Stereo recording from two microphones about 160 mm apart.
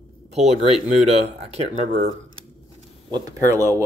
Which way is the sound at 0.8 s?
40° right (ahead or behind).